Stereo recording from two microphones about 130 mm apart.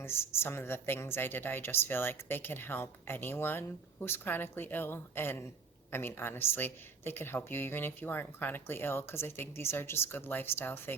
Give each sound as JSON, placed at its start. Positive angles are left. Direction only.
{"t": 0.0, "sound": "a woman's voice", "side_deg": 20}